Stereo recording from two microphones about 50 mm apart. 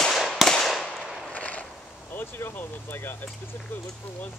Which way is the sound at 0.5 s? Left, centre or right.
Centre.